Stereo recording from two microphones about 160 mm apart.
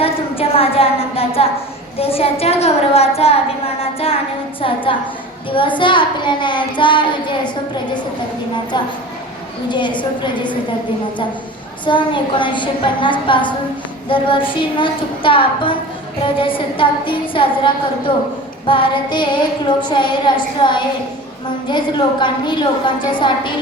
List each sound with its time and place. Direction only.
0.0 s a woman's voice: 35° left (ahead or behind)
9.6 s a woman's voice: 30° left (ahead or behind)
11.9 s a woman's voice: 30° left (ahead or behind)